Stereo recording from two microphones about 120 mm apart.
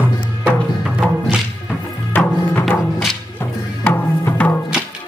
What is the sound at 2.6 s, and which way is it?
Music, centre (ahead or behind).